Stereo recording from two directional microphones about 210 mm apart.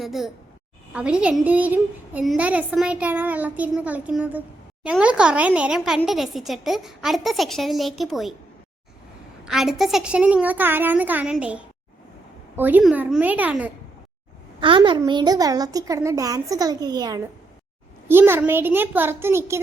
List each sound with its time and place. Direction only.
0.0 s a woman's voice: centre (ahead or behind)
9.4 s a woman's voice: centre (ahead or behind)
14.6 s a woman's voice: 25° right (ahead or behind)